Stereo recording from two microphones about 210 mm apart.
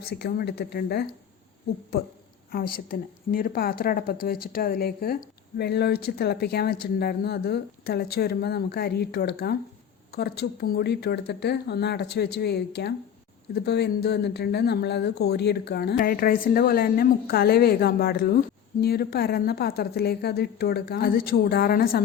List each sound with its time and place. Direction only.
0.0 s speech: 50° left (ahead or behind)
2.5 s speech: 45° left (ahead or behind)